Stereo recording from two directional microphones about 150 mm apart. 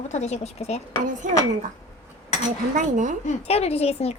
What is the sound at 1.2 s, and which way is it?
Speech, 60° right (ahead or behind).